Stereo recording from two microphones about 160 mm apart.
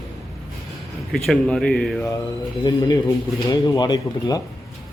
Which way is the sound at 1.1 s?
5° left (ahead or behind).